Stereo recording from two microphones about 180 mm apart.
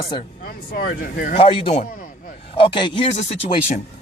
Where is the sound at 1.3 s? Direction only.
30° left (ahead or behind).